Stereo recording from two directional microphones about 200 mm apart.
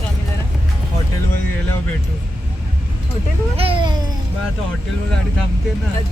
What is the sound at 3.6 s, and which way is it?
Baby cry, 25° right (ahead or behind).